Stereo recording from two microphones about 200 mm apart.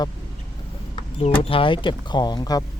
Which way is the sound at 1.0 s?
35° left (ahead or behind).